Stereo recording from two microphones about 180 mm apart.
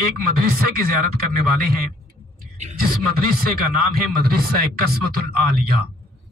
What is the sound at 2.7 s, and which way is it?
Speech, 55° right (ahead or behind).